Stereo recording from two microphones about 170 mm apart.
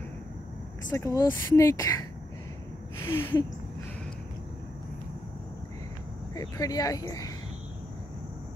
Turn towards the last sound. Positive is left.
turn(degrees=20)  # may be behind; listen again after turning